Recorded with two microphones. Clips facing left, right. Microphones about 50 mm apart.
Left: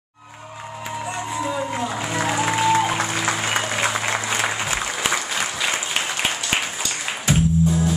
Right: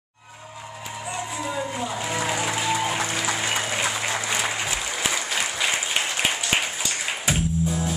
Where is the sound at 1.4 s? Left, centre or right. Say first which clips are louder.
Left 4 dB; centre.